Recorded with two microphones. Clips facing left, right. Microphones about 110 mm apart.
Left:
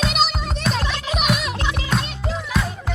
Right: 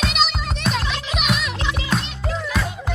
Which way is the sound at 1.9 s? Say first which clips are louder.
Even; centre (ahead or behind).